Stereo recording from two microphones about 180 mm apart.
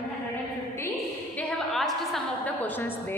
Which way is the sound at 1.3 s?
Centre (ahead or behind).